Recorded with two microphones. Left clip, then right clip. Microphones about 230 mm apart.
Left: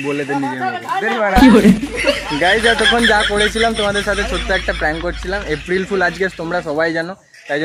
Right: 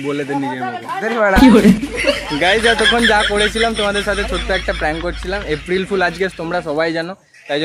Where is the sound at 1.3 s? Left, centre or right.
Centre.